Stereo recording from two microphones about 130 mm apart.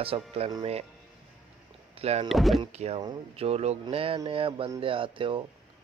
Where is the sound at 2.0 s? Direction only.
55° right (ahead or behind).